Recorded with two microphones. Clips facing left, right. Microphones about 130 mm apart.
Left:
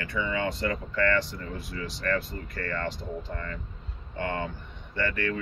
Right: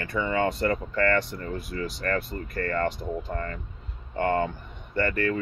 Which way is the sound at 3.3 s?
45° right (ahead or behind).